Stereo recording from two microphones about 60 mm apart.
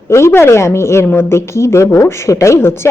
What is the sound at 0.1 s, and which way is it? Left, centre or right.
A woman's voice, left.